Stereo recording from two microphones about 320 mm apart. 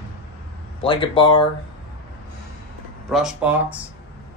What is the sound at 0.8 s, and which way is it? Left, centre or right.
Speech, centre.